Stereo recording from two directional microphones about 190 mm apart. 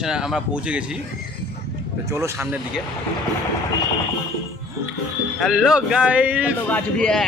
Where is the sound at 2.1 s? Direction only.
15° right (ahead or behind).